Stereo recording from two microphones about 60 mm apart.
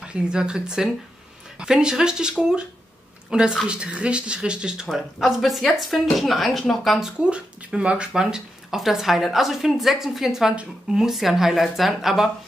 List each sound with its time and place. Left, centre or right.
0.0 s a woman's voice: centre
5.2 s speech: centre
7.2 s speech: centre